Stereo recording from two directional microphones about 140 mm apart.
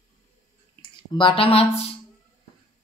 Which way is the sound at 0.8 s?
35° left (ahead or behind).